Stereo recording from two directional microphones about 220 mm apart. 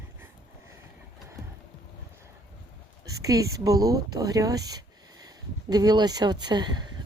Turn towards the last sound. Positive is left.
turn(degrees=-20)  # may be behind; listen again after turning